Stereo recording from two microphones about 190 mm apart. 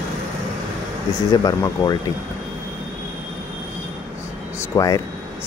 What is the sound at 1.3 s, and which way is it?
Speech, 20° left (ahead or behind).